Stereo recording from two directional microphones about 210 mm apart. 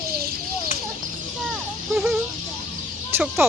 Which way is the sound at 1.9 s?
Centre (ahead or behind).